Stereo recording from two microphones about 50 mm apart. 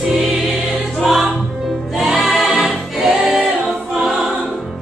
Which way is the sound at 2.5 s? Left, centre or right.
Centre.